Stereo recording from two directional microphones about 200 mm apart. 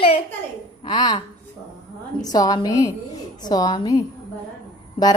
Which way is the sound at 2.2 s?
20° left (ahead or behind).